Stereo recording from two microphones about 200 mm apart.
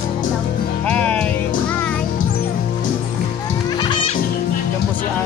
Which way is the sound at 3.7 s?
20° left (ahead or behind).